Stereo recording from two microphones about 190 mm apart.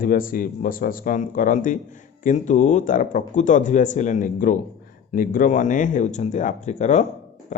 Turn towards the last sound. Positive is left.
turn(degrees=40)  # may be behind; listen again after turning